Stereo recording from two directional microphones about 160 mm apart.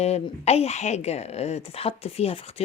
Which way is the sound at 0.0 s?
40° left (ahead or behind).